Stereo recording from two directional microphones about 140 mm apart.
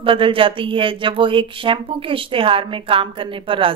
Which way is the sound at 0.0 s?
40° right (ahead or behind).